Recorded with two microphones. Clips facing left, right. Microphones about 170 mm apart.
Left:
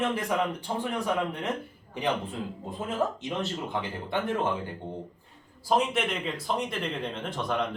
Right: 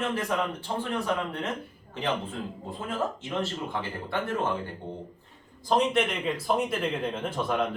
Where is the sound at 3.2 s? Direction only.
20° left (ahead or behind).